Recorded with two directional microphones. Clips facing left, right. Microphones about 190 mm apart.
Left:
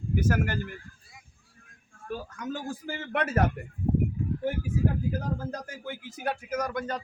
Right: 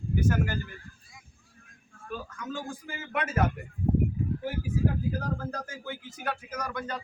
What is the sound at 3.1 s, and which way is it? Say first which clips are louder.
Speech: left 3 dB; 60° left (ahead or behind).